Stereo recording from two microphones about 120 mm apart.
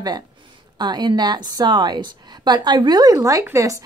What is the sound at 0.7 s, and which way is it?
Speech, 35° right (ahead or behind).